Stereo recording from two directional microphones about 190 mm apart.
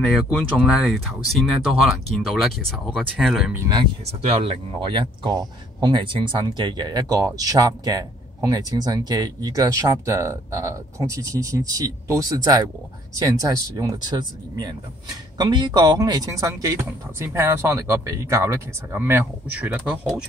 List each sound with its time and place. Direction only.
0.1 s speech: 5° left (ahead or behind)
4.4 s speech: 30° right (ahead or behind); by 20.2 s 5° right (ahead or behind)